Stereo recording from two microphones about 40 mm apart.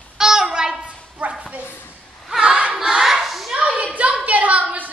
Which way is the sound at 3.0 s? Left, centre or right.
Centre.